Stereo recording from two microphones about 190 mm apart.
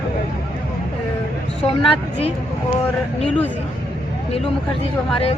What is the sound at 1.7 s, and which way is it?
Speech, 30° left (ahead or behind).